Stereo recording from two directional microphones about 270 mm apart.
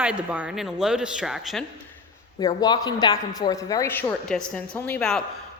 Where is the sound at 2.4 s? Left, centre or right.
Centre.